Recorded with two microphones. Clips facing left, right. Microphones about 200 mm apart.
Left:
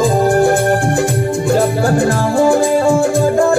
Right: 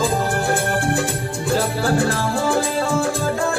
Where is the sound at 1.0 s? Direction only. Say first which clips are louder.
Left 8 dB; 45° left (ahead or behind).